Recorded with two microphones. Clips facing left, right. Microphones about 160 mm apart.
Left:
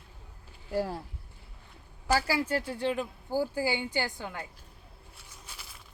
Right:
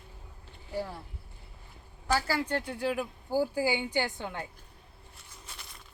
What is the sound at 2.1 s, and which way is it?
A woman's voice, 10° left (ahead or behind).